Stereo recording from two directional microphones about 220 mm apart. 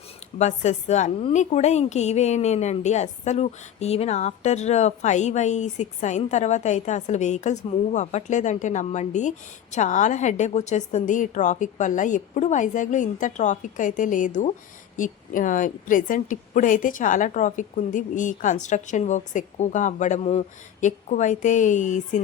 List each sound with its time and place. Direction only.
0.3 s a woman's voice: 30° left (ahead or behind)